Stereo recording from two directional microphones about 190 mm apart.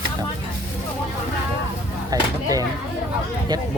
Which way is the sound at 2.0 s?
20° right (ahead or behind).